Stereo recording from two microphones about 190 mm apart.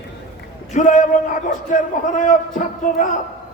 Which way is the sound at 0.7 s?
40° left (ahead or behind).